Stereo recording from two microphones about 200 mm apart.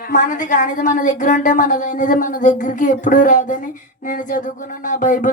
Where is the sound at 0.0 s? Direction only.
40° left (ahead or behind).